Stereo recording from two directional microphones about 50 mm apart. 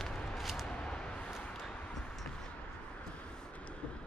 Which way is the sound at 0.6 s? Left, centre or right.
Centre.